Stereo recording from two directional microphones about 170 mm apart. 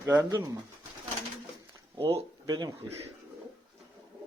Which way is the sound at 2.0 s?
30° right (ahead or behind).